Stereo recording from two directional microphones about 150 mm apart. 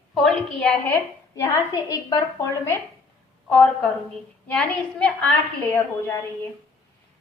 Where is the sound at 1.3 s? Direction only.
25° left (ahead or behind).